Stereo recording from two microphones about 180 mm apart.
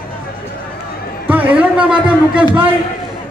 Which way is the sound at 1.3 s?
10° right (ahead or behind).